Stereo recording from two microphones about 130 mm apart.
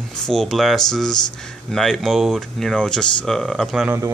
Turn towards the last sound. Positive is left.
turn(degrees=-20)  # may be behind; listen again after turning